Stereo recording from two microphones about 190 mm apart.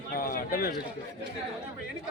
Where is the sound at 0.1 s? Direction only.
50° left (ahead or behind).